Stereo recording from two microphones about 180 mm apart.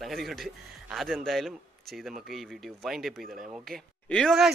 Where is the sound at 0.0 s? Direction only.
Centre (ahead or behind).